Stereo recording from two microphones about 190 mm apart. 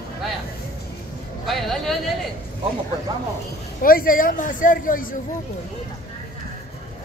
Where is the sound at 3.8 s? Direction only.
50° left (ahead or behind).